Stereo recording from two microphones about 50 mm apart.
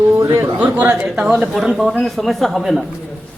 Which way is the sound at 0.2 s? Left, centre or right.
Right.